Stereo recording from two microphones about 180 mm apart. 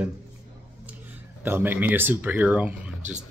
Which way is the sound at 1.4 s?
10° right (ahead or behind).